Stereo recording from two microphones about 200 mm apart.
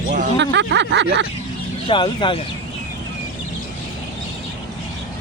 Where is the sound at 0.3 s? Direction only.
60° right (ahead or behind).